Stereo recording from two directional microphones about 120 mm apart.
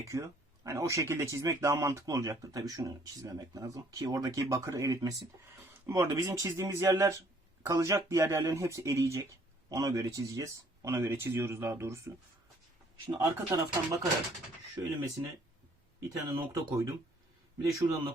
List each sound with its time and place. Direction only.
0.1 s speech: 25° right (ahead or behind)
6.1 s speech: 30° right (ahead or behind)
13.1 s speech: 25° right (ahead or behind)
16.0 s speech: 30° right (ahead or behind)